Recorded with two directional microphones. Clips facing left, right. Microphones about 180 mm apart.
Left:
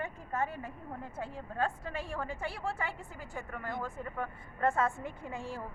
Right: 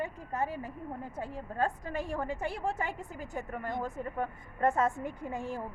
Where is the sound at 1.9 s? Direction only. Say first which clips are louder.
Right 4 dB; 20° right (ahead or behind).